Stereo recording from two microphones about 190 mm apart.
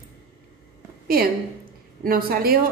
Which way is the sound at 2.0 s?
50° right (ahead or behind).